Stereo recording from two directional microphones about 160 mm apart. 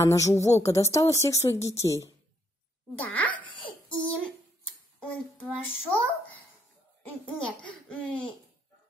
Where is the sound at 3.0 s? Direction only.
10° left (ahead or behind).